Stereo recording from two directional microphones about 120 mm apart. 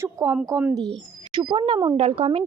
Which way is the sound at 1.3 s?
45° right (ahead or behind).